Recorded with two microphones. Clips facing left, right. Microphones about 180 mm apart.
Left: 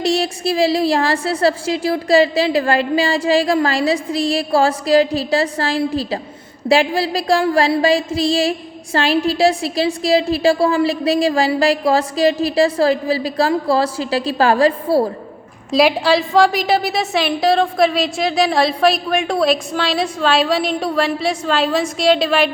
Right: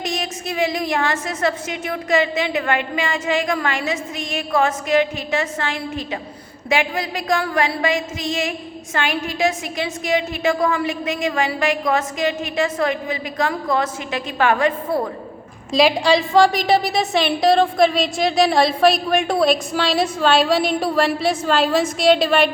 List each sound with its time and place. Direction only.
0.0 s a woman's voice: 30° left (ahead or behind)
15.7 s a woman's voice: 5° left (ahead or behind)